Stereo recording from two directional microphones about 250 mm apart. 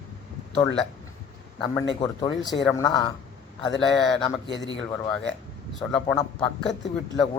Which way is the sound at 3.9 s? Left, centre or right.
Centre.